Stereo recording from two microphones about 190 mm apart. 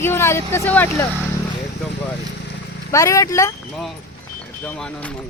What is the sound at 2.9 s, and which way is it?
Speech, 15° left (ahead or behind).